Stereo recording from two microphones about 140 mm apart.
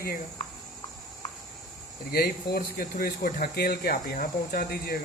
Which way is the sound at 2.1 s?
90° left.